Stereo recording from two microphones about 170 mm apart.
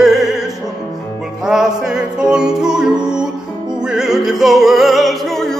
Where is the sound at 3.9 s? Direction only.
5° right (ahead or behind).